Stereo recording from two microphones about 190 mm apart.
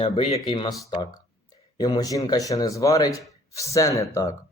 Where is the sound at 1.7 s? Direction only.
20° left (ahead or behind).